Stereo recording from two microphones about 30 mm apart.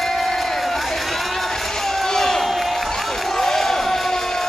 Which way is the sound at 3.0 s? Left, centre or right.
Centre.